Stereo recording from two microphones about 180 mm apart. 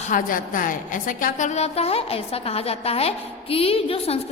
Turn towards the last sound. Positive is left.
turn(degrees=30)  # may be behind; listen again after turning